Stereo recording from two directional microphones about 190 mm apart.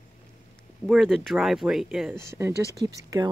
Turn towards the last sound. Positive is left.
turn(degrees=-20)  # may be behind; listen again after turning